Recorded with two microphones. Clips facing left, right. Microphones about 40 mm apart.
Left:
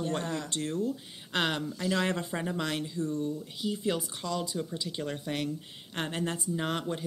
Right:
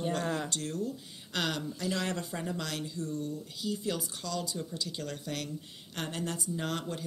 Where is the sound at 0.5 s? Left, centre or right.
Left.